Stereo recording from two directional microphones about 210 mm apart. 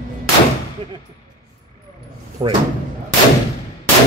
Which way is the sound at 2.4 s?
20° right (ahead or behind).